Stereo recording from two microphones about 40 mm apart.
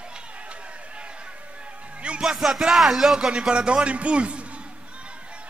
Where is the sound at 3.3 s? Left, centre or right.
Right.